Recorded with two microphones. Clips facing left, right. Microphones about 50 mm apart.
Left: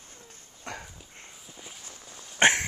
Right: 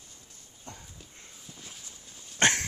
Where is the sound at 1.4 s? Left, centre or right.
Centre.